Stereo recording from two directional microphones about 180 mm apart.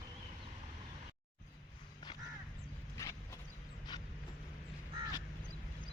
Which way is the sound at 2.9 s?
20° left (ahead or behind).